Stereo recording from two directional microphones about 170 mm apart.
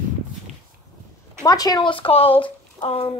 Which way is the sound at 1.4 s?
20° left (ahead or behind).